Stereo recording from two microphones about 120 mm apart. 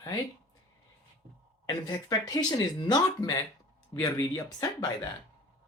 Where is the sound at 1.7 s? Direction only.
35° left (ahead or behind).